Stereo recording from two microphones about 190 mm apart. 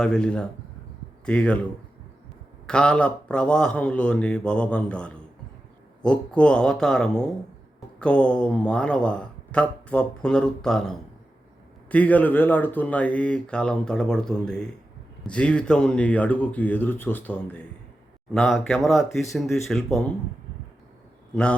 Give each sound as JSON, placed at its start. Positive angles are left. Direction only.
{"t": 0.0, "sound": "speech", "side_deg": 5}
{"t": 2.6, "sound": "speech", "side_deg": 5}